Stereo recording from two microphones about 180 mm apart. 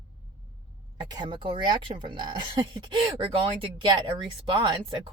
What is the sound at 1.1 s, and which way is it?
Speech, 25° right (ahead or behind).